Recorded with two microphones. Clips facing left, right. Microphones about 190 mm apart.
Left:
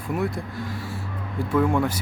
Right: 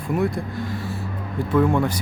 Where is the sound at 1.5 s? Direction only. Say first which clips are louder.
Right 2 dB; 10° left (ahead or behind).